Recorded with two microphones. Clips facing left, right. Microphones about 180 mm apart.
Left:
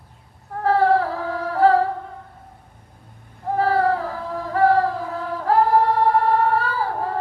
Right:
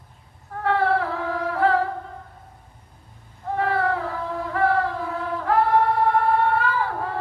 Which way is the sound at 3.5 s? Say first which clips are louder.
Left 4 dB; 35° left (ahead or behind).